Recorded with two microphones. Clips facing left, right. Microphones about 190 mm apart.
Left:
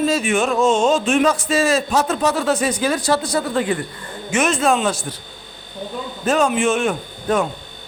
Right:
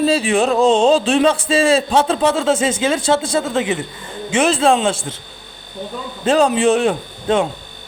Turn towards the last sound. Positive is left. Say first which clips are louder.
# right 2 dB
turn(degrees=-30)  # may be behind; listen again after turning